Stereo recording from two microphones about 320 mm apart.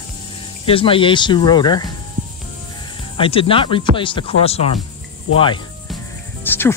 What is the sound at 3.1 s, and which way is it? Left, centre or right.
Speech, centre.